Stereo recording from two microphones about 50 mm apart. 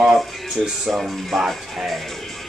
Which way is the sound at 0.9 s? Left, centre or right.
Centre.